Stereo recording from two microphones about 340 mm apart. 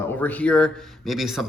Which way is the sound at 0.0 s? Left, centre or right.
Centre.